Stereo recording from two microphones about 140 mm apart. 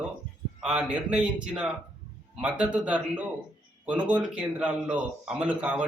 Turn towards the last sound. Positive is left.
turn(degrees=-10)  # may be behind; listen again after turning